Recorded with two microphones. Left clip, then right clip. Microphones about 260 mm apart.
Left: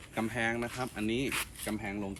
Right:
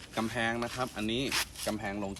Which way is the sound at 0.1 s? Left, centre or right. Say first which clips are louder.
Right 1 dB; centre.